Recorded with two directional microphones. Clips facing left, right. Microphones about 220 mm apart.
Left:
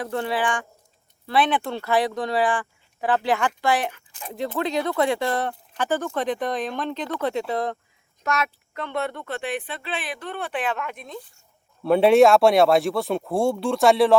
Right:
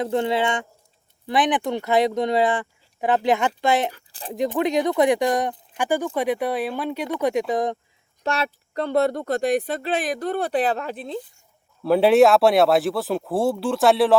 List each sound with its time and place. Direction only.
0.0 s speech: 20° right (ahead or behind)
3.9 s speech: 35° right (ahead or behind)
4.4 s speech: 15° right (ahead or behind)
8.2 s speech: 30° right (ahead or behind)
11.8 s speech: centre (ahead or behind)